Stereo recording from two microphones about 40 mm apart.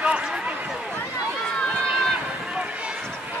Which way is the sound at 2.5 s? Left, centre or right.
Right.